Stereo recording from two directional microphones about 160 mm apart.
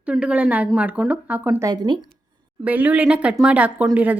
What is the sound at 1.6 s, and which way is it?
Speech, 25° right (ahead or behind).